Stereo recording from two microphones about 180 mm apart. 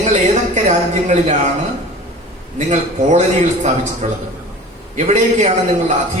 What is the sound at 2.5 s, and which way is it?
A man's voice, 40° right (ahead or behind).